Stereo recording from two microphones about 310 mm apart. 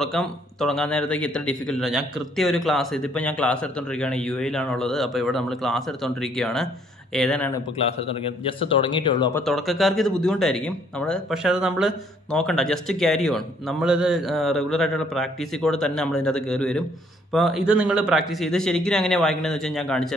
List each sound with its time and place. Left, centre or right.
0.0 s a man's voice: centre
8.1 s speech: centre
9.5 s a man's voice: centre